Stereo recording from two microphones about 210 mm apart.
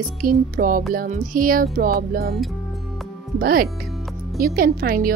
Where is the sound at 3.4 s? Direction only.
45° right (ahead or behind).